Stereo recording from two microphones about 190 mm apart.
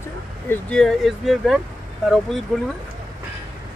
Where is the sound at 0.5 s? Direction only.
5° left (ahead or behind).